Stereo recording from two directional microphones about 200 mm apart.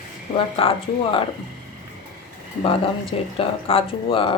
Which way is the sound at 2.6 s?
25° left (ahead or behind).